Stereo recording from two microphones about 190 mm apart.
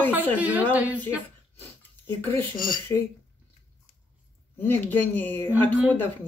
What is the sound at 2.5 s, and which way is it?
Speech, 45° left (ahead or behind).